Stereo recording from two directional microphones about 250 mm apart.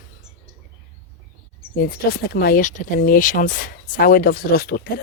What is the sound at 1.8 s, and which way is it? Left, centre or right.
Speech, left.